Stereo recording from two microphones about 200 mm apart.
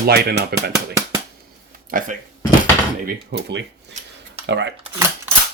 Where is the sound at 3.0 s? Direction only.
60° right (ahead or behind).